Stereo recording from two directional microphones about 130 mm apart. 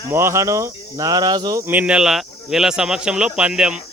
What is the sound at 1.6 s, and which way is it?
Speech, 10° right (ahead or behind).